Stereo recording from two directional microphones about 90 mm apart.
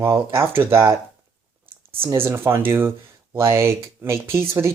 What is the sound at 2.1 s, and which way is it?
Speech, 25° right (ahead or behind).